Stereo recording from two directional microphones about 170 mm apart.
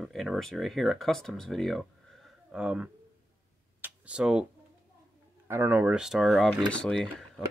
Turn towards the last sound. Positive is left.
turn(degrees=0)  # may be behind; listen again after turning